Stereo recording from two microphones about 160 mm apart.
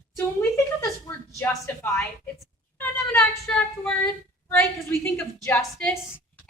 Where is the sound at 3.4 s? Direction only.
10° left (ahead or behind).